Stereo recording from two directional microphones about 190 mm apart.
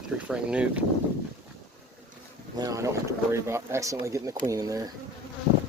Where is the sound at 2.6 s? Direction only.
15° right (ahead or behind).